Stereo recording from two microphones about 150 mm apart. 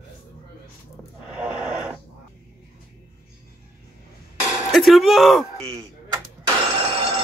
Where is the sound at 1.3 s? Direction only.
5° right (ahead or behind).